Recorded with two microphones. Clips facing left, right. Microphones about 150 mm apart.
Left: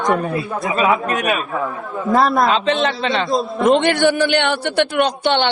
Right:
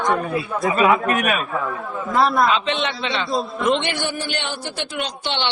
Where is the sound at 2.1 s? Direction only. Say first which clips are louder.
Left 2 dB; 40° left (ahead or behind).